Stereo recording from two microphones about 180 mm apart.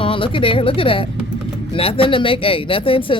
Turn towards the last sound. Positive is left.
turn(degrees=30)  # may be behind; listen again after turning